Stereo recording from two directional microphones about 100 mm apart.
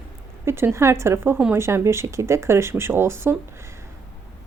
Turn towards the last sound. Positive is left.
turn(degrees=-25)  # may be behind; listen again after turning